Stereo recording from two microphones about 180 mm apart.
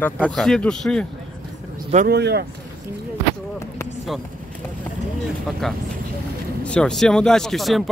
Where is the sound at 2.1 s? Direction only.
65° right (ahead or behind).